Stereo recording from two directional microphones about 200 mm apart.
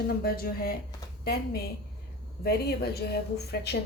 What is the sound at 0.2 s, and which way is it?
Speech, 50° left (ahead or behind).